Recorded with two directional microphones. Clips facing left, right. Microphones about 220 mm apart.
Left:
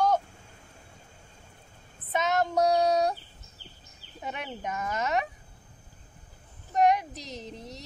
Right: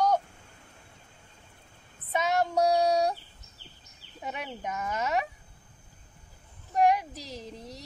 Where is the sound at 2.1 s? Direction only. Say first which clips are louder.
Even; 10° right (ahead or behind).